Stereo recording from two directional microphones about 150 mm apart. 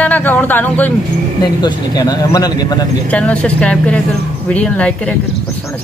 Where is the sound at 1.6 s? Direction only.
25° left (ahead or behind).